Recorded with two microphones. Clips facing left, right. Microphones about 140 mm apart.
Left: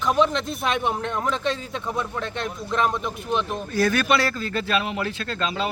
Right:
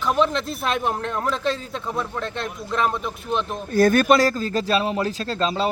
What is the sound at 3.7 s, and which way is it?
Speech, 50° right (ahead or behind).